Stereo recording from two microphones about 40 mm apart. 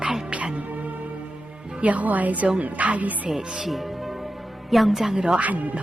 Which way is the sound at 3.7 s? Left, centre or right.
Centre.